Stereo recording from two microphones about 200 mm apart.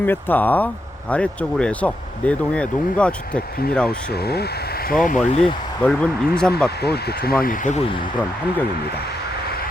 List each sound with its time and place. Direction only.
0.0 s speech: 10° left (ahead or behind)
3.8 s speech: 50° left (ahead or behind)
4.9 s speech: 40° left (ahead or behind)
5.8 s speech: 5° left (ahead or behind)
6.8 s speech: 50° left (ahead or behind)